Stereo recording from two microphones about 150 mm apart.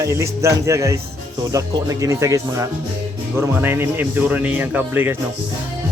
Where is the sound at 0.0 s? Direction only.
20° right (ahead or behind).